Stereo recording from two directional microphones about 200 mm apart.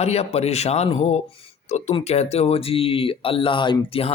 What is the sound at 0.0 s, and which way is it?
Speech, 30° left (ahead or behind).